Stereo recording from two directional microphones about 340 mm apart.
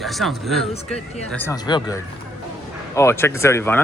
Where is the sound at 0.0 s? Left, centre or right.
Centre.